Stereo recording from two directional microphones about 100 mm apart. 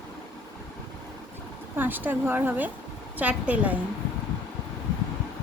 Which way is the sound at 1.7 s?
20° right (ahead or behind).